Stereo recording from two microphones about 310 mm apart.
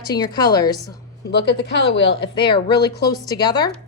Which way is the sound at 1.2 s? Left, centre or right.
Left.